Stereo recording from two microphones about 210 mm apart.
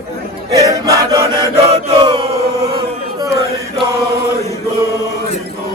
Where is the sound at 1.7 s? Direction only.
25° right (ahead or behind).